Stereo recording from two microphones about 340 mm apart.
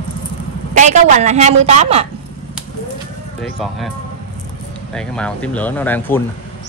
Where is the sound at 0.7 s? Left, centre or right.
Right.